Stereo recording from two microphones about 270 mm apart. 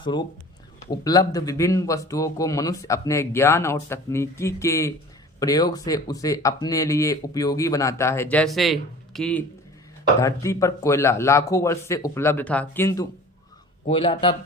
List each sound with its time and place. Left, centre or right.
0.0 s a man's voice: centre